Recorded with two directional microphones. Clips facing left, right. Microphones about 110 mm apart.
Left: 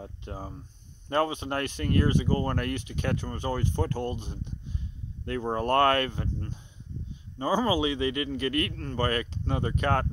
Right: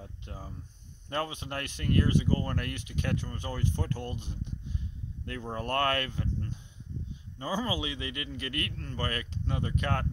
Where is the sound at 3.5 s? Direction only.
55° left (ahead or behind).